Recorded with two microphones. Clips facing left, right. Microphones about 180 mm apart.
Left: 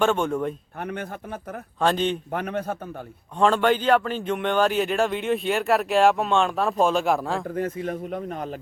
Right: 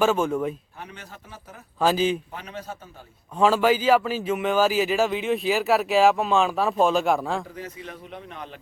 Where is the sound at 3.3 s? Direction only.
5° right (ahead or behind).